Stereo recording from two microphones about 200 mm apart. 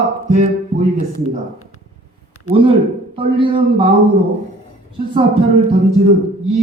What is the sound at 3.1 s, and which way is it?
Speech, 25° right (ahead or behind).